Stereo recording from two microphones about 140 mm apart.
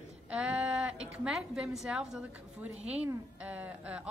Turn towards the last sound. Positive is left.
turn(degrees=-10)  # may be behind; listen again after turning